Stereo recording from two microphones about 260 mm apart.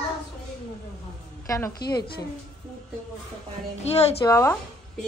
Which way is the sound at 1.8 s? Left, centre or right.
Left.